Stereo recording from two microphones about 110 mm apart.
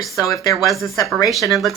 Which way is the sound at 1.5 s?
Centre (ahead or behind).